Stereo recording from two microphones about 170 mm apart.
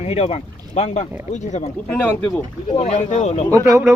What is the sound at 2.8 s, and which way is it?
Speech, 45° left (ahead or behind).